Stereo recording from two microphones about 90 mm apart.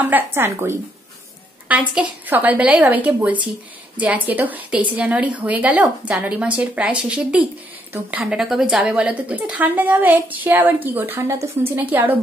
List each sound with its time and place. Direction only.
0.0 s a woman's voice: 20° right (ahead or behind)